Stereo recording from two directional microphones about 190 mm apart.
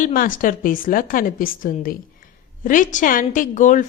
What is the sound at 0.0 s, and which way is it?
A woman's voice, 45° left (ahead or behind).